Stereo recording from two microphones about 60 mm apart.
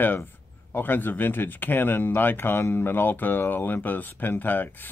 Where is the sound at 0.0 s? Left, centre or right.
Left.